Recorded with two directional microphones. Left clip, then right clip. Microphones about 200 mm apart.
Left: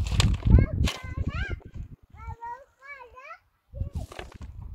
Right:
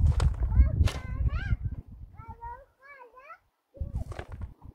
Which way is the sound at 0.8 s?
5° right (ahead or behind).